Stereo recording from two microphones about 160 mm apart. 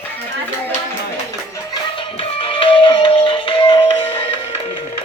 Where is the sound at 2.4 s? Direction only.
35° left (ahead or behind).